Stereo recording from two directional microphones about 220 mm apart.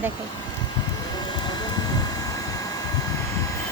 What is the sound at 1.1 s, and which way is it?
Vehicle, 20° left (ahead or behind).